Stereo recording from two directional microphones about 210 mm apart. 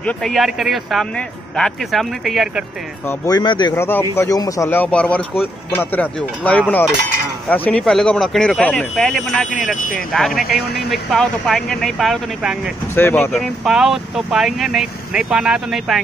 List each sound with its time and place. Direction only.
0.0 s speech: centre (ahead or behind)
3.1 s speech: 20° left (ahead or behind); by 12.7 s centre (ahead or behind)
12.9 s speech: 10° left (ahead or behind)
13.3 s speech: centre (ahead or behind)